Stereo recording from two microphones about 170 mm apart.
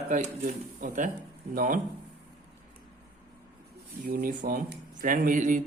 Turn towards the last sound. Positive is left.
turn(degrees=-50)  # may be behind; listen again after turning